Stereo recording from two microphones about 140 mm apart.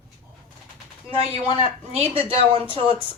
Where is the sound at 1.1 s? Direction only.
45° right (ahead or behind).